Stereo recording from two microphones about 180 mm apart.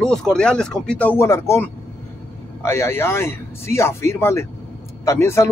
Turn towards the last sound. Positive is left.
turn(degrees=15)  # may be behind; listen again after turning